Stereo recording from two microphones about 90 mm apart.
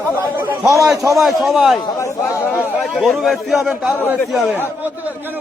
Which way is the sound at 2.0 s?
30° left (ahead or behind).